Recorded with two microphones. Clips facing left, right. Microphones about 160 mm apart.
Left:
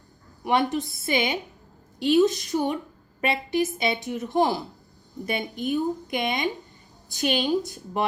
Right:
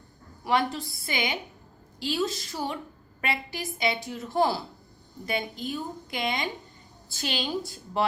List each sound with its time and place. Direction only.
0.4 s a woman's voice: 20° left (ahead or behind)